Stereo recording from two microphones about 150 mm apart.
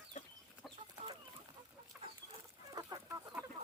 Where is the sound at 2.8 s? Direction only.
20° right (ahead or behind).